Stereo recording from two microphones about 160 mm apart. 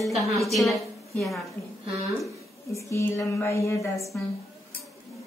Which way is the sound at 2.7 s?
20° left (ahead or behind).